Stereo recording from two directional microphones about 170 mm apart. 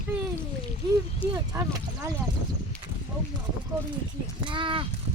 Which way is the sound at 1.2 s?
10° left (ahead or behind).